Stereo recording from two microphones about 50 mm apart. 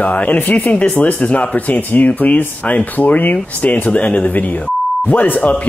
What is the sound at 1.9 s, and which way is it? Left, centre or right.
Speech, left.